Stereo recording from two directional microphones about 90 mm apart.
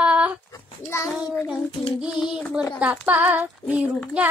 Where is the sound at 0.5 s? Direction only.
35° left (ahead or behind).